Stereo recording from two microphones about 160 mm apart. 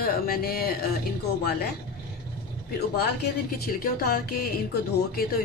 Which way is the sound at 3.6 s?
70° left (ahead or behind).